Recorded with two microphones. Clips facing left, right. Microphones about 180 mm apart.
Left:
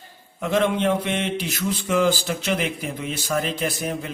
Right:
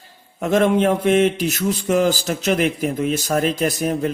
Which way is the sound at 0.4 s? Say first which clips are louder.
Right 4 dB; 45° right (ahead or behind).